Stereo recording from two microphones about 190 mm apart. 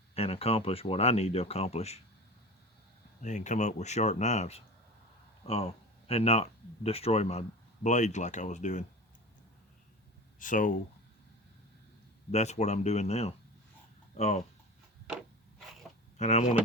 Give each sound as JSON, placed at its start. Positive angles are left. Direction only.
{"t": 0.1, "sound": "speech", "side_deg": 30}
{"t": 3.2, "sound": "speech", "side_deg": 40}
{"t": 10.4, "sound": "speech", "side_deg": 45}
{"t": 12.3, "sound": "speech", "side_deg": 35}
{"t": 15.1, "sound": "a sound", "side_deg": 0}
{"t": 16.1, "sound": "speech", "side_deg": 35}